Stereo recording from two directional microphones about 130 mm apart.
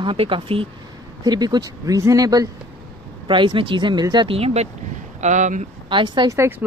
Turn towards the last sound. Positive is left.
turn(degrees=-20)  # may be behind; listen again after turning